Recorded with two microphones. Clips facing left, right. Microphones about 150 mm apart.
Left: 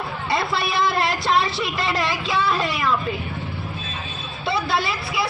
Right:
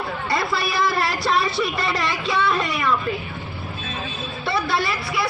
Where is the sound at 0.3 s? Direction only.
25° left (ahead or behind).